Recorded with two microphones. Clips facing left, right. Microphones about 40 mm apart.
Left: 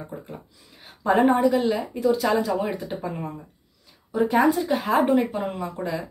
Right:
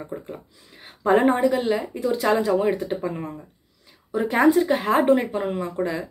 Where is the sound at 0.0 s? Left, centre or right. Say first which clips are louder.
Right 3 dB; centre.